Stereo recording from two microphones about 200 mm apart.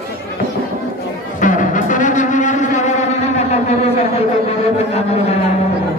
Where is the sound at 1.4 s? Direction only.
40° left (ahead or behind).